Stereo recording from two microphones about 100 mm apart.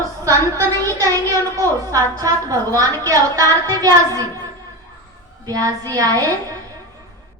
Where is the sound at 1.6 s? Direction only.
35° right (ahead or behind).